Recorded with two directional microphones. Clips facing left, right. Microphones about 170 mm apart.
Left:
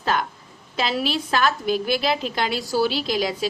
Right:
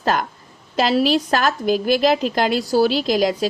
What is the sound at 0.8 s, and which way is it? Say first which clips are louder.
A woman's voice: right 7 dB; 40° right (ahead or behind).